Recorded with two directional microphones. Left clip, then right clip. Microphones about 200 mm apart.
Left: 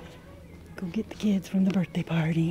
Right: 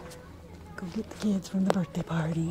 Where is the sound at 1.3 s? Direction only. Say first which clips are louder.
Right 1 dB; 15° left (ahead or behind).